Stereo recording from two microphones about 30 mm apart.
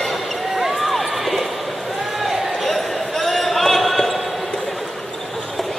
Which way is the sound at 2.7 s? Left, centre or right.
Centre.